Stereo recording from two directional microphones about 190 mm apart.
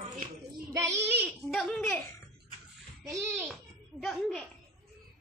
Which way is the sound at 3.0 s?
15° right (ahead or behind).